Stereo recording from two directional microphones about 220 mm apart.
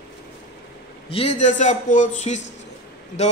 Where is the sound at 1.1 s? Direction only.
30° left (ahead or behind).